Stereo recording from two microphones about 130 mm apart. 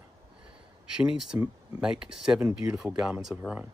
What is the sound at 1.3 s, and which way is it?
Speech, 20° right (ahead or behind).